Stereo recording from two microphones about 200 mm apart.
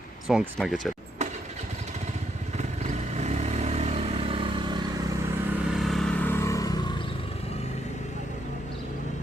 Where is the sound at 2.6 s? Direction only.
35° right (ahead or behind).